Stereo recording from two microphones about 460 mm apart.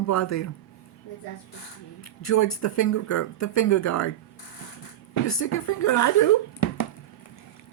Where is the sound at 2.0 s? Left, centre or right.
Left.